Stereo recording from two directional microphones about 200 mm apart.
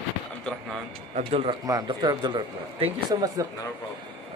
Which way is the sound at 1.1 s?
30° right (ahead or behind).